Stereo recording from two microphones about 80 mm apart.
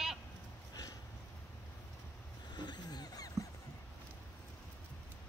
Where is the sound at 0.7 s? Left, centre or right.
Left.